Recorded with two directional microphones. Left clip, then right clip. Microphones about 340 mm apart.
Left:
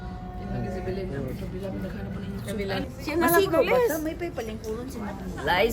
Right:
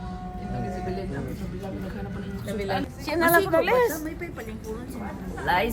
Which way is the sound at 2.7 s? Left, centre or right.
Centre.